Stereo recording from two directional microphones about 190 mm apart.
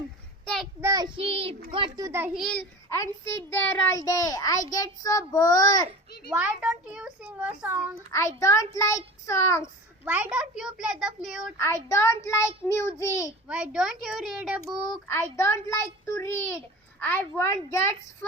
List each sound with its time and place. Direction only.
0.4 s a sound: centre (ahead or behind)
0.8 s a child's voice: 20° right (ahead or behind)
2.4 s a child's voice: 5° left (ahead or behind)
6.3 s a child's voice: 5° right (ahead or behind)
8.1 s a child's voice: 15° left (ahead or behind)
10.0 s a child's voice: 10° right (ahead or behind)
11.5 s a child's voice: 15° left (ahead or behind)
13.5 s a child's voice: 5° right (ahead or behind)
15.0 s a child's voice: 15° left (ahead or behind)